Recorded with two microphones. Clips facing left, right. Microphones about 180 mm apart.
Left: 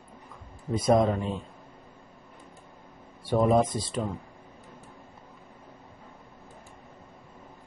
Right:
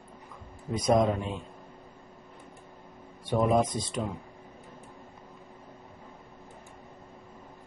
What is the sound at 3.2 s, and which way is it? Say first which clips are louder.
Speech: left 2 dB; 5° left (ahead or behind).